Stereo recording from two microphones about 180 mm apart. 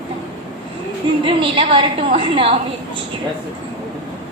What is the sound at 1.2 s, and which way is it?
A woman's voice, 30° right (ahead or behind).